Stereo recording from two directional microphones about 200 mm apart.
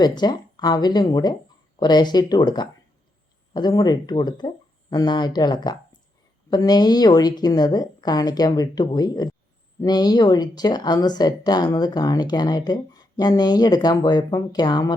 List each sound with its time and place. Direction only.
0.0 s speech: 20° left (ahead or behind)